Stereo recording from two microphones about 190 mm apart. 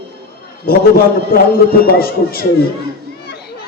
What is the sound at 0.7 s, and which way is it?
A man's voice, 50° left (ahead or behind).